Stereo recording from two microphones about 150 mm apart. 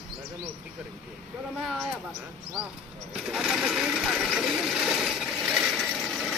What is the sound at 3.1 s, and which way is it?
Sewing machine, 5° right (ahead or behind).